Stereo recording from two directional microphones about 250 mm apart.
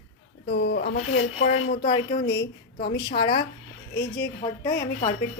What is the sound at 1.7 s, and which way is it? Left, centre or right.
A woman's voice, centre.